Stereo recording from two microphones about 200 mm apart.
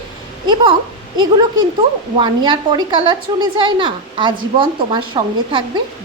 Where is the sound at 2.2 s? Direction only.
20° right (ahead or behind).